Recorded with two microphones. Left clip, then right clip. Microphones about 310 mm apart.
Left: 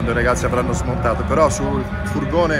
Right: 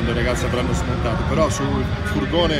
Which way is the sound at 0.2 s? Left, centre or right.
Centre.